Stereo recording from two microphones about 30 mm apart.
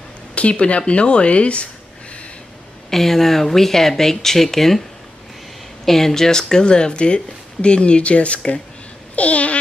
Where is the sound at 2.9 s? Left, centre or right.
Centre; by 8.4 s left.